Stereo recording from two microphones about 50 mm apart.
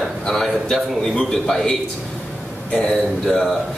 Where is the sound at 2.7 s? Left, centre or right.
Centre.